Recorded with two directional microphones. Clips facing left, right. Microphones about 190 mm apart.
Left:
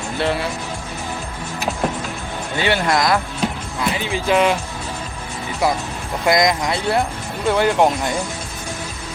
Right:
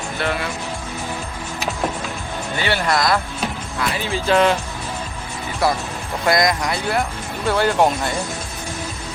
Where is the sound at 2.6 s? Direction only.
15° left (ahead or behind).